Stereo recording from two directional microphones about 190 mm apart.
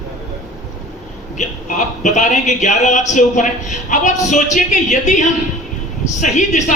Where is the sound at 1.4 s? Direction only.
40° left (ahead or behind).